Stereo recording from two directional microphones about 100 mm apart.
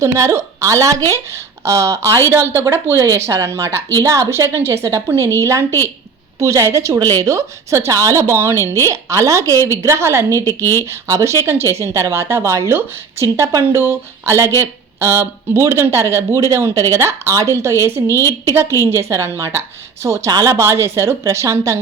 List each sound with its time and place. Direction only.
0.0 s a woman's voice: 30° right (ahead or behind)
8.5 s a woman's voice: 30° left (ahead or behind)
8.8 s a woman's voice: 30° right (ahead or behind)
10.4 s a woman's voice: 25° left (ahead or behind)
10.8 s a woman's voice: 25° right (ahead or behind)
18.1 s a woman's voice: 25° left (ahead or behind)
18.8 s a woman's voice: 25° right (ahead or behind)